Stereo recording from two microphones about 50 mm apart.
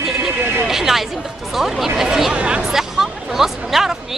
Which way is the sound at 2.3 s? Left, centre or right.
Right.